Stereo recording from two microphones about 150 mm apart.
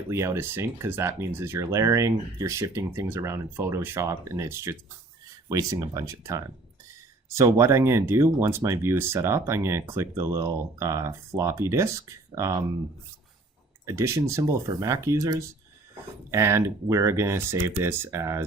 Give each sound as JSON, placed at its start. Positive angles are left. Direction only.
{"t": 0.1, "sound": "speech", "side_deg": -20}
{"t": 13.8, "sound": "speech", "side_deg": -20}